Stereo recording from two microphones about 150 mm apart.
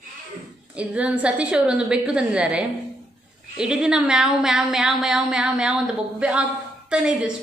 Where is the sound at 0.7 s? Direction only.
10° right (ahead or behind).